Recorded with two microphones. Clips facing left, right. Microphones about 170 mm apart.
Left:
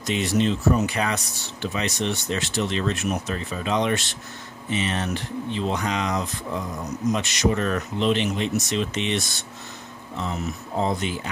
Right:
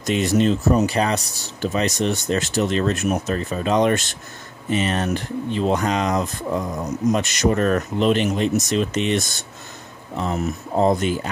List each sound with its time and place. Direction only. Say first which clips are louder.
0.0 s speech: right 4 dB; 45° right (ahead or behind)